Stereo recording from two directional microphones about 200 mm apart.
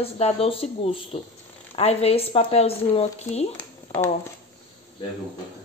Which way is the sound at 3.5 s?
10° left (ahead or behind).